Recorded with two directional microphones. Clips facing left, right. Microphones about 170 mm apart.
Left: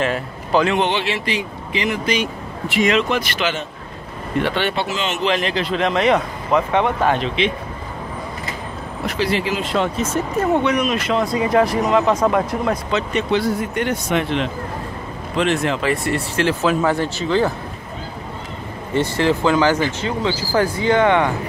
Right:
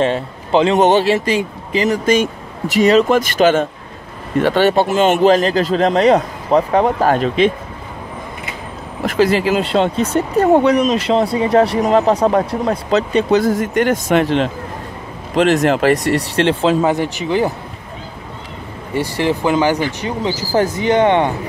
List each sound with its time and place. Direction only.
0.0 s a man's voice: 25° right (ahead or behind)
0.7 s speech: 45° right (ahead or behind)
9.1 s speech: 45° right (ahead or behind)
13.5 s speech: 90° right
14.1 s speech: 35° right (ahead or behind)
16.8 s speech: 15° right (ahead or behind)
18.9 s speech: 15° right (ahead or behind)